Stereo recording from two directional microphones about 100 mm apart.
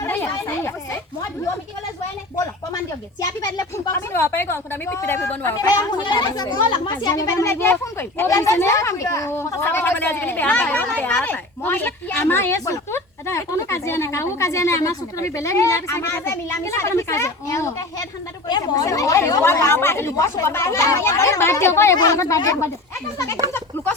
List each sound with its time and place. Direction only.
0.1 s chatter: 25° left (ahead or behind)
3.2 s speech: 45° left (ahead or behind)
3.9 s speech: 25° left (ahead or behind)
5.5 s a child's voice: 40° left (ahead or behind)
7.5 s speech: 20° left (ahead or behind)
8.3 s speech: 30° left (ahead or behind)
18.4 s a child's voice: 40° left (ahead or behind); by 20.1 s 25° left (ahead or behind)
20.1 s a child's voice: 35° left (ahead or behind)
20.4 s a child's voice: 25° left (ahead or behind)